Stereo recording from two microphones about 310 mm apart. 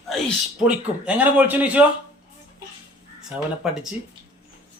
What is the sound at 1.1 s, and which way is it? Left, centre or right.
Speech, centre.